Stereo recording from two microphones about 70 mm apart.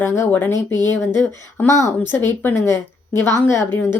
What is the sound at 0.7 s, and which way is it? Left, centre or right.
Speech, right.